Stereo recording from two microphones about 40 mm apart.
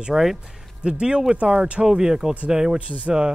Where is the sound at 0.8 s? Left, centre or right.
Right.